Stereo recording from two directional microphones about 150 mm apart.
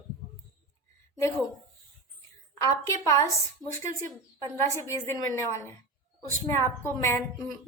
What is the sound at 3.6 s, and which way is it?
Speech, 20° right (ahead or behind).